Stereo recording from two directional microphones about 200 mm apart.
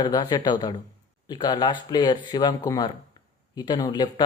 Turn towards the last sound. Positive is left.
turn(degrees=20)  # may be behind; listen again after turning